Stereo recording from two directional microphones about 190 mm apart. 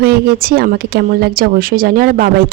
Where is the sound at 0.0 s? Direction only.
55° right (ahead or behind).